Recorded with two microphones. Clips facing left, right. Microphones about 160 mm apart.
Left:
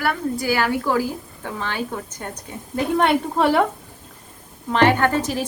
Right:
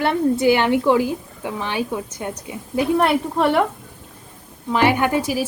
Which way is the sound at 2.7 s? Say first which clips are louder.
Right 1 dB; centre (ahead or behind).